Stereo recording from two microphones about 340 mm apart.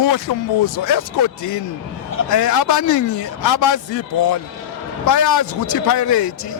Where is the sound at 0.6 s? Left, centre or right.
Left.